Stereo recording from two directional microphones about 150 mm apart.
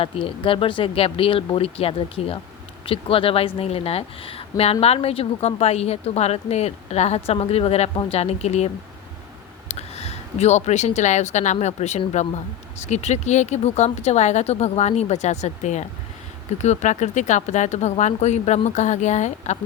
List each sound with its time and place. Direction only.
0.0 s speech: 35° left (ahead or behind); by 19.5 s 50° left (ahead or behind)